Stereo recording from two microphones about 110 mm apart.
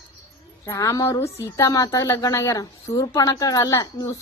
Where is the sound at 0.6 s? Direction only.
25° left (ahead or behind).